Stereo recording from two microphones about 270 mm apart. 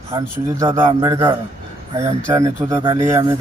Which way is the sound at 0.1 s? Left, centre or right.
Centre.